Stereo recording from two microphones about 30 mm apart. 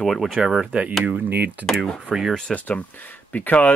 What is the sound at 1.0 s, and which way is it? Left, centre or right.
Speech, right.